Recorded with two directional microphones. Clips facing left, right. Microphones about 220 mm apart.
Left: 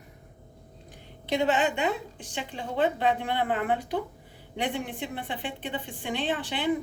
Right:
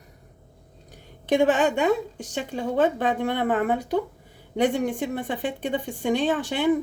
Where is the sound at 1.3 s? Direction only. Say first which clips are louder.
Right 5 dB; 50° right (ahead or behind).